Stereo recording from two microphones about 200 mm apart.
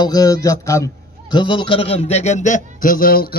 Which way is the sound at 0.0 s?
20° left (ahead or behind).